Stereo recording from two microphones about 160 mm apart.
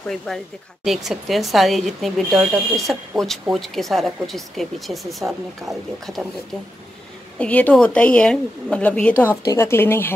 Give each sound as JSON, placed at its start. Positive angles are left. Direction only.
{"t": 0.0, "sound": "speech", "side_deg": 0}
{"t": 7.3, "sound": "a woman's voice", "side_deg": 10}
{"t": 9.4, "sound": "a woman's voice", "side_deg": 20}